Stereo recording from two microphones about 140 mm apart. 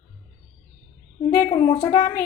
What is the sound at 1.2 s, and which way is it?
A woman's voice, 35° left (ahead or behind).